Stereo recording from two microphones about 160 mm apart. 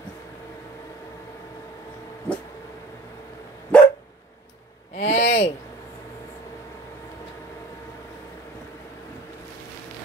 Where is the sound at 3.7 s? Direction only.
10° left (ahead or behind).